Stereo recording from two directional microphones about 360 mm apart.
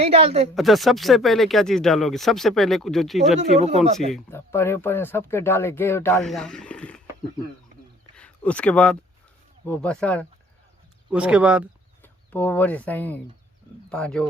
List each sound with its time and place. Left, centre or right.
0.0 s a woman's voice: centre
0.5 s speech: centre
8.1 s a sound: centre
9.6 s speech: centre